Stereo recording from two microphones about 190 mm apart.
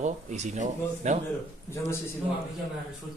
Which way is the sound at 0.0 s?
40° right (ahead or behind).